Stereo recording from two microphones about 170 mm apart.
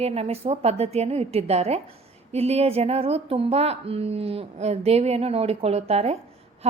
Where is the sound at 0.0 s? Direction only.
35° right (ahead or behind).